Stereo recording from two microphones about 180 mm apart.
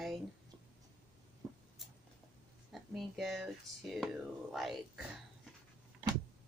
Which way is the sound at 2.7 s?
Centre (ahead or behind).